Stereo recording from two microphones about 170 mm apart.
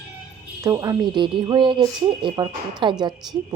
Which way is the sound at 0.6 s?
20° right (ahead or behind).